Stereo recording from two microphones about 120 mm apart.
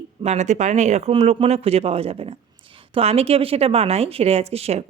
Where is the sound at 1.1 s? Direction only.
60° right (ahead or behind).